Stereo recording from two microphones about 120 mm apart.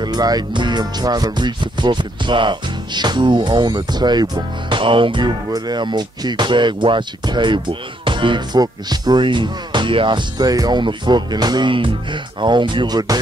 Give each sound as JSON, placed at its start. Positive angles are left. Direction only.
{"t": 0.0, "sound": "speech", "side_deg": -35}